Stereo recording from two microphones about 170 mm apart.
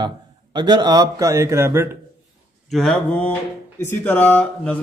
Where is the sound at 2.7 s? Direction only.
Centre (ahead or behind).